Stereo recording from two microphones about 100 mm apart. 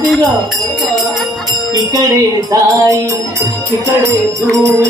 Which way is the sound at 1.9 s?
35° right (ahead or behind).